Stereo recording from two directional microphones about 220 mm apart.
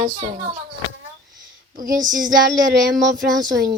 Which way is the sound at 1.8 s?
15° right (ahead or behind).